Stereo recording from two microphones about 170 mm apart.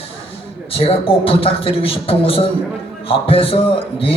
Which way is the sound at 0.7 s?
35° left (ahead or behind).